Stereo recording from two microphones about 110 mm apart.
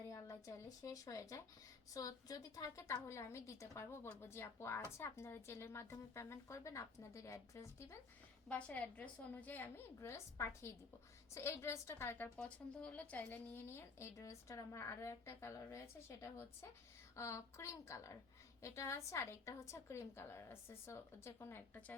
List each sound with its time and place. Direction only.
0.1 s speech: 25° left (ahead or behind)
8.4 s a woman's voice: 10° left (ahead or behind)